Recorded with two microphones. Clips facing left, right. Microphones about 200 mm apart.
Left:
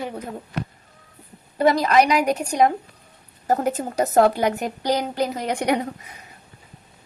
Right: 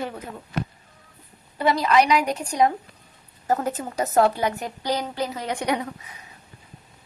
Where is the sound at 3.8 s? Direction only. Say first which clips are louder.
Left 3 dB; 40° left (ahead or behind).